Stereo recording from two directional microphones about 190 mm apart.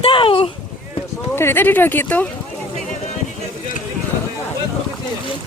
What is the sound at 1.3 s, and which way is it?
Speech, 10° left (ahead or behind).